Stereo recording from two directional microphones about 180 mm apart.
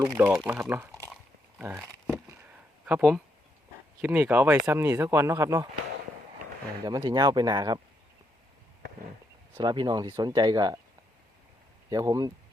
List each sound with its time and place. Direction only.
0.1 s speech: 5° right (ahead or behind)
1.5 s a sound: 10° right (ahead or behind)
2.8 s speech: 5° right (ahead or behind)
6.8 s speech: 20° right (ahead or behind)
9.6 s speech: 25° right (ahead or behind)
11.9 s speech: 20° right (ahead or behind)